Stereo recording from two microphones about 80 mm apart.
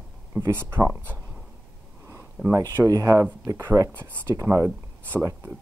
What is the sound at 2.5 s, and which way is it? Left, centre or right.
Speech, right.